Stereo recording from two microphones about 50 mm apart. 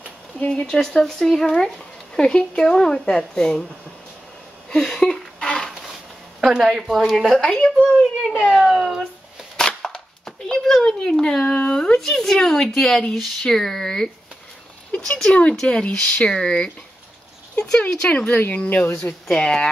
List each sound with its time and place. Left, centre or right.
0.5 s speech: centre
4.6 s a sound: centre
6.4 s a woman's voice: centre
7.4 s speech: centre
8.0 s a child's voice: centre
9.6 s cap gun: centre
11.7 s speech: centre
18.1 s speech: left
19.2 s speech: centre